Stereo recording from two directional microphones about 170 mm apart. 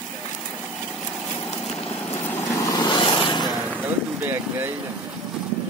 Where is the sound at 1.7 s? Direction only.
40° left (ahead or behind).